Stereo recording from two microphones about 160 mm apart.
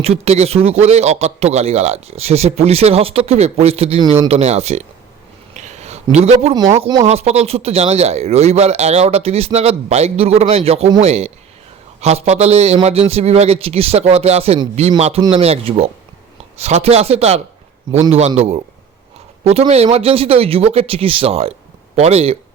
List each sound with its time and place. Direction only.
0.0 s speech: 40° right (ahead or behind)
5.5 s a sound: 45° right (ahead or behind)
6.7 s speech: 40° right (ahead or behind)